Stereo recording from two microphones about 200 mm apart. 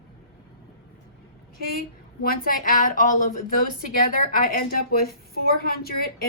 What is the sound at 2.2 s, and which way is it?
A woman's voice, 45° left (ahead or behind).